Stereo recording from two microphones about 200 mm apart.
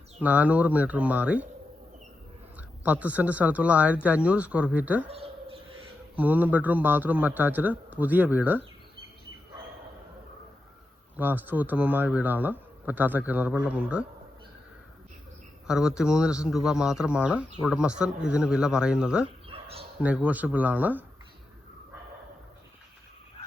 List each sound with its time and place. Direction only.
0.2 s speech: 10° right (ahead or behind)
2.6 s speech: 10° right (ahead or behind)
5.0 s bird: 30° right (ahead or behind)
6.1 s speech: 10° right (ahead or behind)
11.2 s speech: 10° right (ahead or behind)
15.6 s speech: 5° right (ahead or behind)
19.5 s a sound: 30° right (ahead or behind)
20.0 s speech: 5° right (ahead or behind)